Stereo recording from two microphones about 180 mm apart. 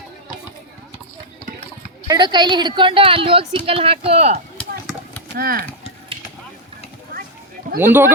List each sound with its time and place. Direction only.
2.0 s a woman's voice: 25° right (ahead or behind)
5.3 s speech: 55° right (ahead or behind)
7.8 s a man's voice: 10° right (ahead or behind)